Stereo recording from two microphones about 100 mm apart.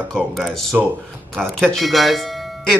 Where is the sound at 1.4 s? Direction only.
5° left (ahead or behind).